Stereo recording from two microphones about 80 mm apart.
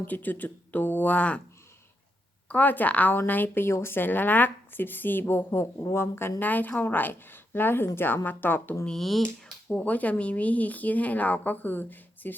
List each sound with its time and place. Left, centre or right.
0.0 s a woman's voice: left
2.5 s a woman's voice: left
8.9 s speech: centre
9.6 s a woman's voice: centre